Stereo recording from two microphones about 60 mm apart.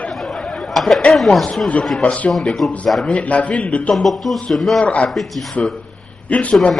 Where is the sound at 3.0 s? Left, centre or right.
Centre.